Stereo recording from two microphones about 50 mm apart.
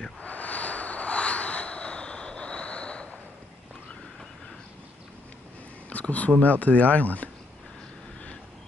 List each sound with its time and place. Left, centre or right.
0.2 s vehicle: left
5.9 s a sound: left
6.4 s speech: left